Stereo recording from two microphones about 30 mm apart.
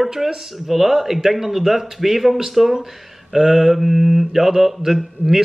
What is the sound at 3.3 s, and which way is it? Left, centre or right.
Mantra, centre.